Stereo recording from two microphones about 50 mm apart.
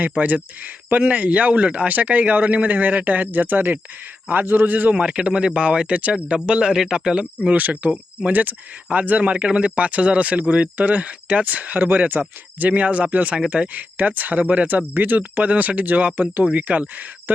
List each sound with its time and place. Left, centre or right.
0.0 s speech: right
4.9 s speech: centre
7.5 s speech: right
14.8 s speech: right